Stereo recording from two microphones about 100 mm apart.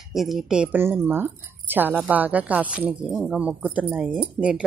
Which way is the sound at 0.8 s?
20° right (ahead or behind).